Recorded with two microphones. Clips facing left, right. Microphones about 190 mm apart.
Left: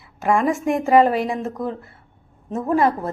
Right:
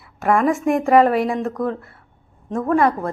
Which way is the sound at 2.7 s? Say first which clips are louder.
Right 1 dB; centre (ahead or behind).